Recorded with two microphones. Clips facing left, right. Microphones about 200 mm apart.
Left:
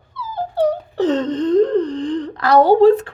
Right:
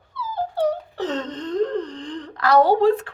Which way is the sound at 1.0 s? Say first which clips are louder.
Left 9 dB; 30° left (ahead or behind).